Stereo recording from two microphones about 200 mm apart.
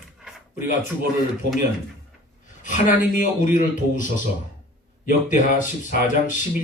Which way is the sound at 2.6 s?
40° left (ahead or behind).